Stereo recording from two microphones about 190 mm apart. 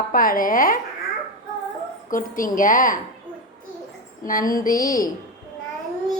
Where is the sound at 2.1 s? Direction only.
45° left (ahead or behind).